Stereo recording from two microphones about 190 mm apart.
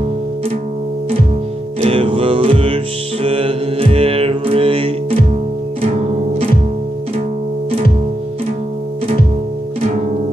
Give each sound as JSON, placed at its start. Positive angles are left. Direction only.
{"t": 1.8, "sound": "music", "side_deg": -30}